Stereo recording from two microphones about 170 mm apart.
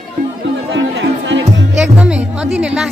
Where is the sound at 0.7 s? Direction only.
90° right.